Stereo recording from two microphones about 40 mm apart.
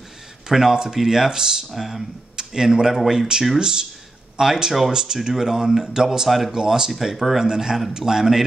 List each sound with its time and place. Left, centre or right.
0.5 s speech: centre
6.5 s speech: centre